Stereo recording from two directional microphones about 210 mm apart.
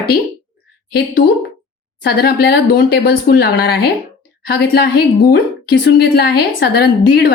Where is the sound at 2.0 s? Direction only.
50° left (ahead or behind).